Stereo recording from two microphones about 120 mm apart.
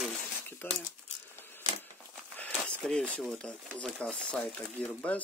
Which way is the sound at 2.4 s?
10° left (ahead or behind).